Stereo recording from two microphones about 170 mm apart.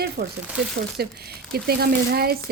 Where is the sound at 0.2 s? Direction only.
60° right (ahead or behind).